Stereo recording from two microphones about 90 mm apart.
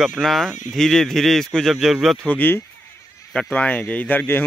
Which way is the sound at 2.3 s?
20° left (ahead or behind).